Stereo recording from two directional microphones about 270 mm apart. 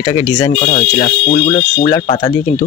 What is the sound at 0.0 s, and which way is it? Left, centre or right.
Speech, centre.